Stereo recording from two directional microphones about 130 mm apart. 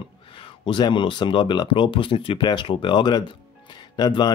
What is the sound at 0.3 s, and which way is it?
Speech, 40° left (ahead or behind).